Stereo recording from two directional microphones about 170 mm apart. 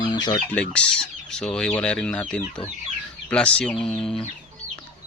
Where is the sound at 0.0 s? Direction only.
25° left (ahead or behind).